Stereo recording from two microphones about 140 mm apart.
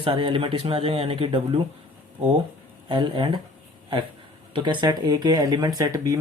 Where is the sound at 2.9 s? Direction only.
35° right (ahead or behind).